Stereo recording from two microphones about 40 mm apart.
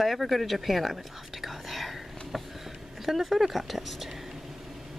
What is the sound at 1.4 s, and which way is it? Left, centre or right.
Whispering, centre.